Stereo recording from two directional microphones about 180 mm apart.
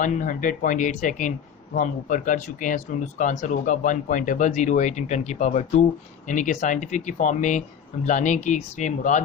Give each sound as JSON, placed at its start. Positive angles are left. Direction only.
{"t": 0.0, "sound": "speech", "side_deg": 45}